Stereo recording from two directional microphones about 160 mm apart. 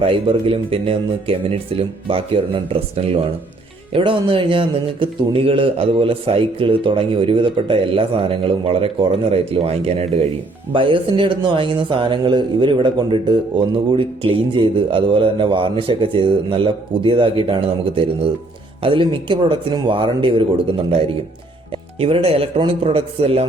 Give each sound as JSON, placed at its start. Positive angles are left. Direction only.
{"t": 0.0, "sound": "speech", "side_deg": -35}
{"t": 21.9, "sound": "speech", "side_deg": -35}